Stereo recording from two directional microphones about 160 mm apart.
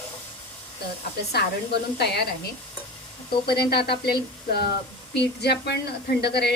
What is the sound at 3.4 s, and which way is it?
Speech, 85° left.